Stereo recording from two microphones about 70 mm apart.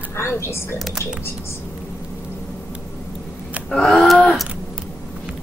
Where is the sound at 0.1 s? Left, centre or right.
Left.